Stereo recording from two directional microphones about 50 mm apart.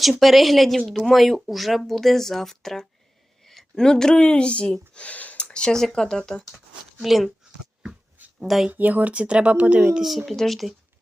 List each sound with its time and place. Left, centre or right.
0.2 s speech: centre
7.0 s speech: centre
8.4 s speech: centre
8.7 s speech: right
10.0 s speech: centre